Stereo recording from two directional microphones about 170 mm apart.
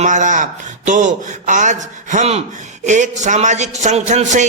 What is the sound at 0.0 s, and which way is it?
A man's voice, 45° right (ahead or behind).